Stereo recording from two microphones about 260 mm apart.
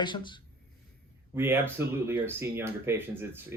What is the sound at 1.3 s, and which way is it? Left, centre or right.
Speech, centre.